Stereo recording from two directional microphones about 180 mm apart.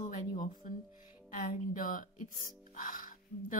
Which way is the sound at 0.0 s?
45° left (ahead or behind).